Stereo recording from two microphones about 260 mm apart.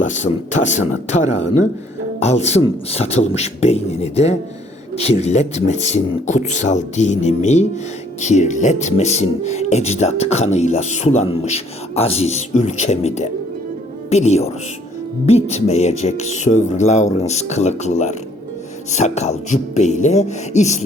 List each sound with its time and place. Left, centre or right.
0.0 s speech: left